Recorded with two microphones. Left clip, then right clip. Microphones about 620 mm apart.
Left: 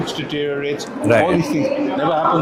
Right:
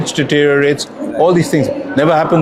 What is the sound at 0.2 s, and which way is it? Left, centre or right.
Speech, right.